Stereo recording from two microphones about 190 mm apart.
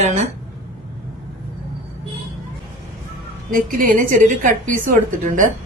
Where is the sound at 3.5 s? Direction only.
45° right (ahead or behind).